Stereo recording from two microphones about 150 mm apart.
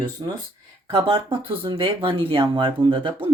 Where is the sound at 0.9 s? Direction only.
35° right (ahead or behind).